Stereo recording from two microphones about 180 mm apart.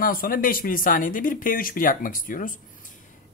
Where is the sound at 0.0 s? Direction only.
50° left (ahead or behind).